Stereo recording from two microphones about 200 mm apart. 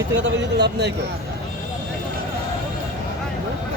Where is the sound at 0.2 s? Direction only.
60° right (ahead or behind).